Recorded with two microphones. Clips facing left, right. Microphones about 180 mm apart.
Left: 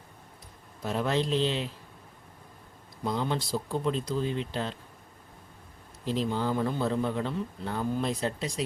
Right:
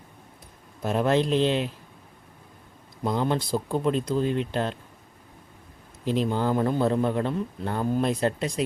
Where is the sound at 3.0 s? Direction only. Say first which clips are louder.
Right 5 dB; 55° right (ahead or behind).